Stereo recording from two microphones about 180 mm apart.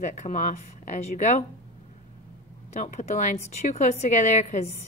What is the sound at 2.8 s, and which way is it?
A woman's voice, 45° left (ahead or behind).